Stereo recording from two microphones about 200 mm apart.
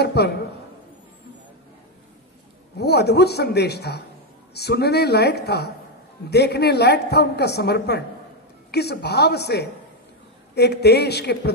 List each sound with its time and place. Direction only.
0.0 s a woman's voice: 55° left (ahead or behind)
2.8 s a woman's voice: 55° left (ahead or behind)